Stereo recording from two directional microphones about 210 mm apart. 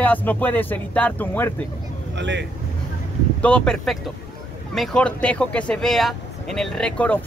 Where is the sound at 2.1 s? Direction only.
60° right (ahead or behind).